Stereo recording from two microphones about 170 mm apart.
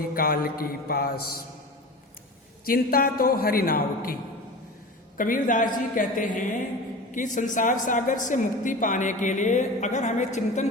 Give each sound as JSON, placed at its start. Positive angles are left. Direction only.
{"t": 0.1, "sound": "a man's voice", "side_deg": 60}
{"t": 2.6, "sound": "a man's voice", "side_deg": 60}